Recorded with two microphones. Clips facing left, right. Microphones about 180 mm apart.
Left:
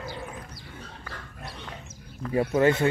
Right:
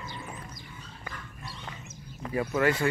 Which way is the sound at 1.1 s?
75° left (ahead or behind).